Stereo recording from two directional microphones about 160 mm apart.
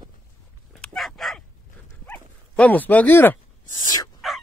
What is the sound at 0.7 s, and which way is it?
Dog, 5° left (ahead or behind).